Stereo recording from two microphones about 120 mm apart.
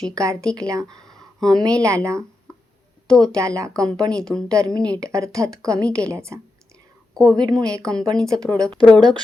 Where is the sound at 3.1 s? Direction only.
5° left (ahead or behind).